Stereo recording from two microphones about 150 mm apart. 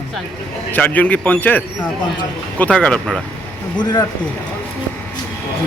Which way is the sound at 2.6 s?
10° left (ahead or behind).